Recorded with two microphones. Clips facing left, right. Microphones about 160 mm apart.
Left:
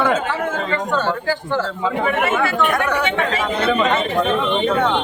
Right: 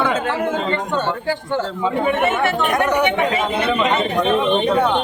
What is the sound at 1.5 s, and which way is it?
Speech, 20° right (ahead or behind).